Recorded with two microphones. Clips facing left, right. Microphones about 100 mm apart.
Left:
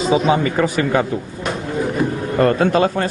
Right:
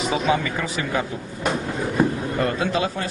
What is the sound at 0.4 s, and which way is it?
Speech, 50° left (ahead or behind).